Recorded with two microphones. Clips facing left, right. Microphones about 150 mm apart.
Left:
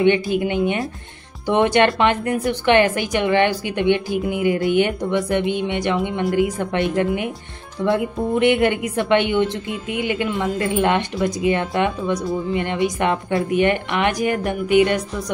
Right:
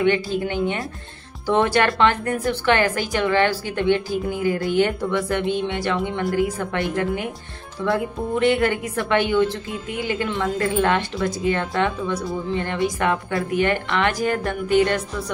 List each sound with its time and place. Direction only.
0.0 s a woman's voice: 20° left (ahead or behind)
12.2 s speech: centre (ahead or behind)
12.5 s a woman's voice: 20° left (ahead or behind)